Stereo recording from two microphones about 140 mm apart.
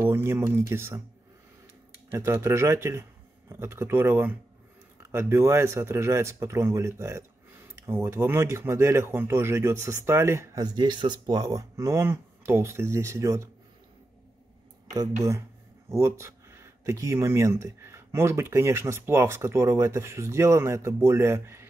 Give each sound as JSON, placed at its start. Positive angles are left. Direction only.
{"t": 0.0, "sound": "speech", "side_deg": -15}
{"t": 2.0, "sound": "speech", "side_deg": -15}
{"t": 15.0, "sound": "speech", "side_deg": -20}